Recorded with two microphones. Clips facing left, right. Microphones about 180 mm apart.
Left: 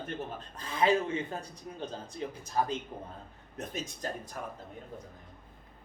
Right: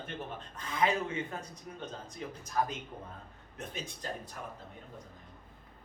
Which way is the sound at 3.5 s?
40° left (ahead or behind).